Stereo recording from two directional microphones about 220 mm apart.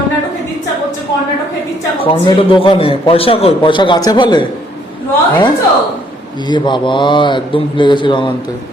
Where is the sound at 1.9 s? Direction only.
25° left (ahead or behind).